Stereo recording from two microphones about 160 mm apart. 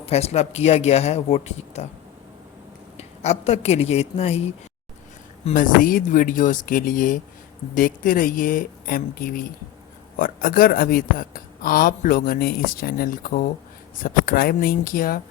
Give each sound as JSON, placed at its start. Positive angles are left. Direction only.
{"t": 0.0, "sound": "speech", "side_deg": 40}
{"t": 3.0, "sound": "a woman's voice", "side_deg": 40}
{"t": 5.5, "sound": "a woman's voice", "side_deg": 60}